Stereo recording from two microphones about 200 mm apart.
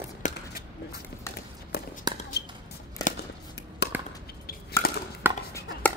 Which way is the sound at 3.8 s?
55° left (ahead or behind).